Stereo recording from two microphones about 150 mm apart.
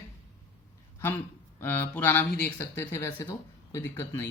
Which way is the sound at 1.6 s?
15° left (ahead or behind).